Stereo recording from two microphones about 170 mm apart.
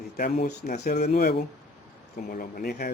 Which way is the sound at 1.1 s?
70° left (ahead or behind).